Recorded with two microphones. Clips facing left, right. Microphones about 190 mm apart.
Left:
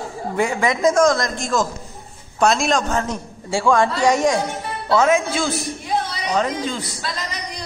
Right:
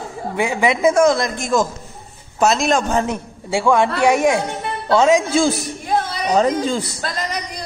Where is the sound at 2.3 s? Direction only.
5° right (ahead or behind).